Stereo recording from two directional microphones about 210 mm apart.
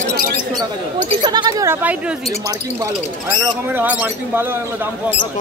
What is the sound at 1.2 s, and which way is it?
Speech, 20° right (ahead or behind).